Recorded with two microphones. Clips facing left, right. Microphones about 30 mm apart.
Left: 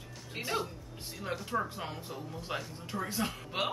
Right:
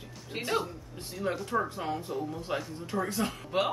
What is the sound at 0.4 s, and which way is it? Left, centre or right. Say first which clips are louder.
Speech: right 4 dB; centre.